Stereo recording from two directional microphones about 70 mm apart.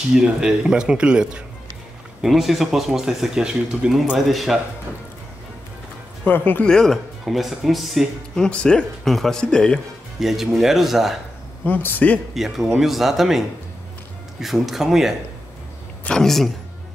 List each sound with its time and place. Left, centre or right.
0.1 s speech: centre
4.3 s speech: centre
6.2 s speech: left
6.6 s speech: centre
8.4 s speech: centre
10.2 s speech: centre
11.6 s speech: left
12.4 s speech: centre
14.4 s speech: centre
16.2 s speech: centre